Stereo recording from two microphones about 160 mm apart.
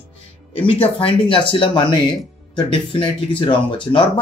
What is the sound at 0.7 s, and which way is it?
Speech, 35° left (ahead or behind).